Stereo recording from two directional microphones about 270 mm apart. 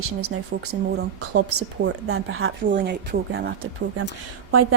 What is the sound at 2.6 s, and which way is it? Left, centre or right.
Speech, right.